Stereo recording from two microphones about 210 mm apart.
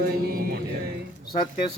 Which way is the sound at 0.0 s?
45° right (ahead or behind).